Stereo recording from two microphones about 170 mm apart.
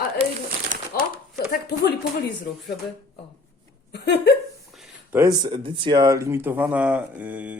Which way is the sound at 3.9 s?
80° left.